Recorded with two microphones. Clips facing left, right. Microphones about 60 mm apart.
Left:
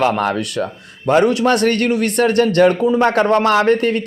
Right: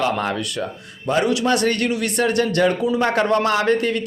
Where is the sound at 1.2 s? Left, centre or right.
Left.